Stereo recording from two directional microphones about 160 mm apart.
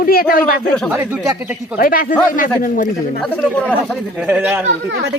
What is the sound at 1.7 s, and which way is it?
A man's voice, 60° left (ahead or behind).